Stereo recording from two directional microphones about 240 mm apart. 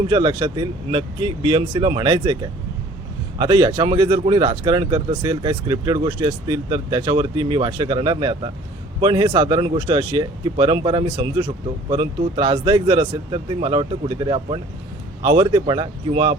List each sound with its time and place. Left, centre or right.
0.1 s speech: centre